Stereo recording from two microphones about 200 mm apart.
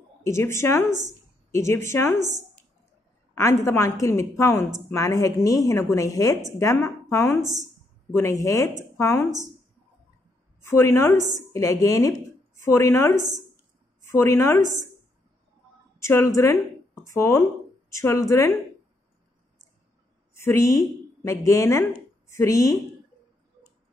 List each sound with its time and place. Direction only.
0.2 s speech: 15° left (ahead or behind)
3.3 s speech: 15° left (ahead or behind)
7.4 s a woman's voice: 35° right (ahead or behind)
8.1 s speech: 15° left (ahead or behind)
10.6 s speech: 15° left (ahead or behind)
11.1 s a woman's voice: 35° right (ahead or behind)
11.5 s speech: 15° left (ahead or behind)
14.1 s speech: 15° left (ahead or behind)
14.6 s a woman's voice: 35° right (ahead or behind)
16.0 s speech: 15° left (ahead or behind)
20.3 s a woman's voice: 15° left (ahead or behind)